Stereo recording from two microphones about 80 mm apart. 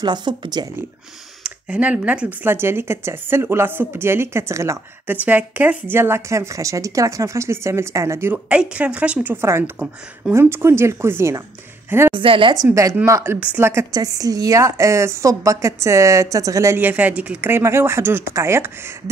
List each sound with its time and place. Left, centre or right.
0.0 s speech: right
1.4 s speech: centre; by 4.7 s right
5.0 s speech: right
8.5 s a woman's voice: centre; by 11.4 s right
12.1 s speech: right
13.0 s speech: right
13.9 s speech: right
16.7 s speech: right
17.5 s speech: right